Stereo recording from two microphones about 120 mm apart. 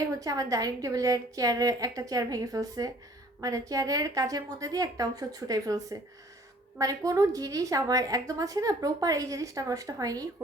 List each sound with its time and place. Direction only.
0.0 s a woman's voice: 30° right (ahead or behind)